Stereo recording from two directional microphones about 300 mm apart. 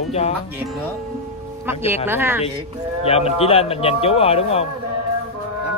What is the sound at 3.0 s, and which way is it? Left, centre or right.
Speech, centre.